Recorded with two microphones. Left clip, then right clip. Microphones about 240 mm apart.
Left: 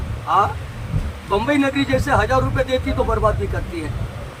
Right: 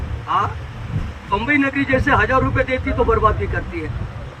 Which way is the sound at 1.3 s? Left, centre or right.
Left.